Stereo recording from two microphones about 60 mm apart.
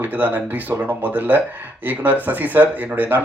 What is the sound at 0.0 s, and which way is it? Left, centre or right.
Speech, right.